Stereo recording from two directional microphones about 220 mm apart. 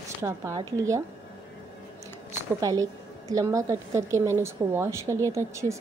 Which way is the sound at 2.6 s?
15° right (ahead or behind).